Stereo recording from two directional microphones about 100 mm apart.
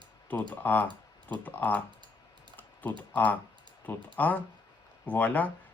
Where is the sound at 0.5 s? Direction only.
20° left (ahead or behind).